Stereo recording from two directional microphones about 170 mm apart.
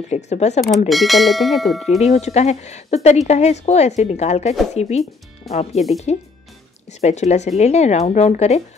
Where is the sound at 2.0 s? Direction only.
40° left (ahead or behind).